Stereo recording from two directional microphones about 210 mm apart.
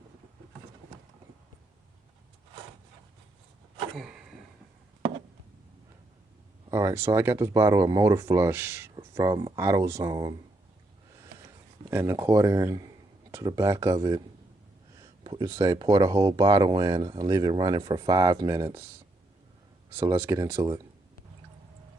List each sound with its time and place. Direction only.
3.9 s a sound: centre (ahead or behind)
6.7 s speech: 15° right (ahead or behind)
11.9 s speech: 10° right (ahead or behind)
15.2 s speech: 20° right (ahead or behind)